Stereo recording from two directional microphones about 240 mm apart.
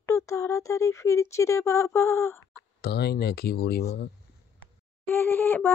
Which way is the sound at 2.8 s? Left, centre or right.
Left.